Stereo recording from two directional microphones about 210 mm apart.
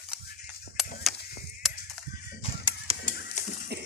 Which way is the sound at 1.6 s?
Centre (ahead or behind).